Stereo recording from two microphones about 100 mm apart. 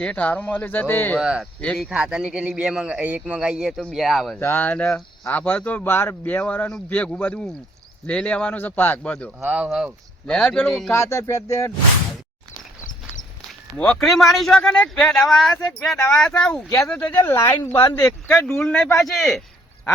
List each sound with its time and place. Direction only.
0.0 s speech: 15° left (ahead or behind)
1.2 s speech: 10° right (ahead or behind)
4.4 s speech: 20° left (ahead or behind)
9.4 s speech: 15° right (ahead or behind)
10.2 s speech: 10° left (ahead or behind)
10.9 s a sound: 30° left (ahead or behind)
13.7 s speech: 5° left (ahead or behind)
17.3 s a sound: 20° left (ahead or behind)
18.6 s speech: 10° left (ahead or behind)